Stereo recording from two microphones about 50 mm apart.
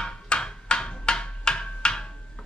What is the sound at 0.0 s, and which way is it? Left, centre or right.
Wood block, centre.